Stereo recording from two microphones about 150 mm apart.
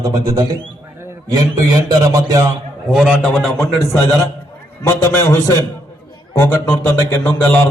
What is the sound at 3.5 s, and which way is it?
A man's voice, 20° left (ahead or behind).